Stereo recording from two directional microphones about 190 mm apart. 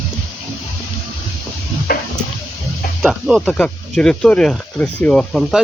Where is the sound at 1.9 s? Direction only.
50° left (ahead or behind).